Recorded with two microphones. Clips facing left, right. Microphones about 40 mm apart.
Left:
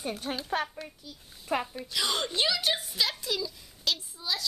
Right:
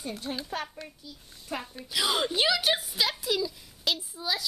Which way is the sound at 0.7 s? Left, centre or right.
Centre.